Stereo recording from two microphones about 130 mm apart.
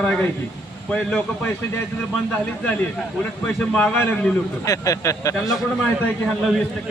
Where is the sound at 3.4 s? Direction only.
10° left (ahead or behind).